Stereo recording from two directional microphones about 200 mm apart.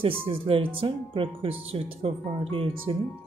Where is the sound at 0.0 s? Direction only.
25° right (ahead or behind).